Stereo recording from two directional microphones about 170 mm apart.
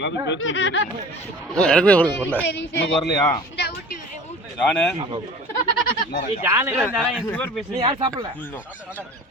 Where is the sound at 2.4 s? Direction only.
90° left.